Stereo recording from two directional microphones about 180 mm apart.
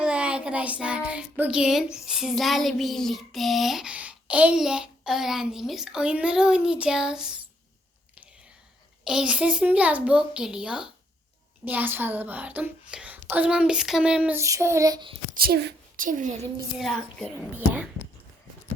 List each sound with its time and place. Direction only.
0.0 s child singing: 5° right (ahead or behind)
9.0 s child singing: 5° right (ahead or behind)
11.6 s speech: 10° right (ahead or behind); by 15.2 s 25° right (ahead or behind)
15.4 s a woman's voice: 60° right (ahead or behind)
16.0 s a woman's voice: 45° right (ahead or behind)
16.7 s child singing: centre (ahead or behind)